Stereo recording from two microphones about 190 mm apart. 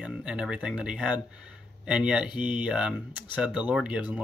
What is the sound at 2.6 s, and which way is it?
Speech, 5° right (ahead or behind).